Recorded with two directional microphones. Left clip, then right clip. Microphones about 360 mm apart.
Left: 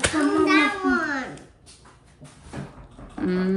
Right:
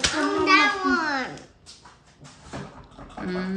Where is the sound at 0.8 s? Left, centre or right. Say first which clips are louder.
Even; centre.